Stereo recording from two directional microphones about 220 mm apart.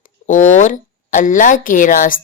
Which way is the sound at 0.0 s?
35° left (ahead or behind).